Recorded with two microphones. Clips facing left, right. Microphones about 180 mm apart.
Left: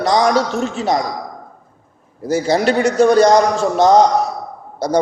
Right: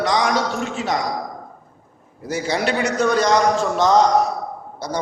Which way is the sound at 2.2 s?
40° left (ahead or behind).